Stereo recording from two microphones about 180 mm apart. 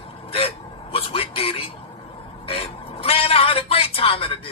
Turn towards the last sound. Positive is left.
turn(degrees=30)  # may be behind; listen again after turning